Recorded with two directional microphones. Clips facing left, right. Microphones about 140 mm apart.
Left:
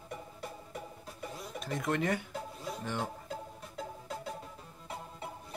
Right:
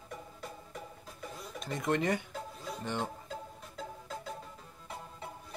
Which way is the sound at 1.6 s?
Centre (ahead or behind).